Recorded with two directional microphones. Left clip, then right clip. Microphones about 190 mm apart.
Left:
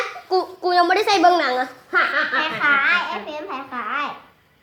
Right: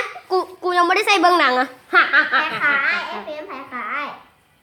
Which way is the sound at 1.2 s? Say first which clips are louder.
Right 1 dB; 35° right (ahead or behind).